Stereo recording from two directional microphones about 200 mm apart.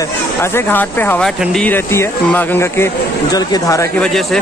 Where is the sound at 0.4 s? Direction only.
10° left (ahead or behind).